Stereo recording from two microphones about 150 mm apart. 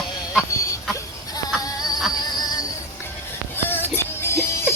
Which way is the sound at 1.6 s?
25° left (ahead or behind).